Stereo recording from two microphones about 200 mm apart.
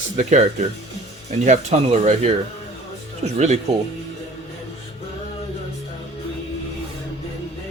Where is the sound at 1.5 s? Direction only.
35° right (ahead or behind).